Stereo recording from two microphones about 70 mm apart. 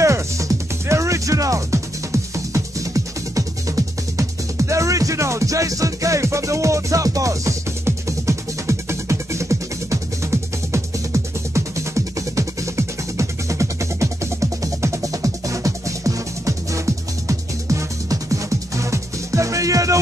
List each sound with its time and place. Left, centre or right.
0.0 s music: right